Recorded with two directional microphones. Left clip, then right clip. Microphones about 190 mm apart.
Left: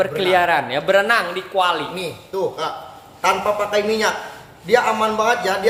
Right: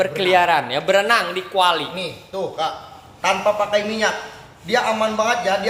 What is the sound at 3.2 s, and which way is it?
A man's voice, 50° left (ahead or behind).